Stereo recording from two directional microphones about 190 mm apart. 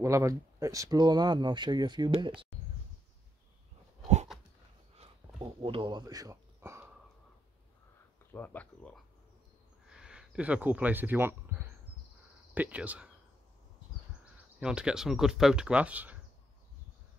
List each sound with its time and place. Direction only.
0.0 s speech: 15° right (ahead or behind)
4.9 s a sound: 30° right (ahead or behind)
8.3 s speech: 10° left (ahead or behind)
9.8 s speech: 5° right (ahead or behind)
14.6 s speech: 5° right (ahead or behind)